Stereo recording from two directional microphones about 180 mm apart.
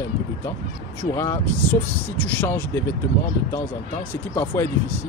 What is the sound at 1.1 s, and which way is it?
Speech, 15° left (ahead or behind).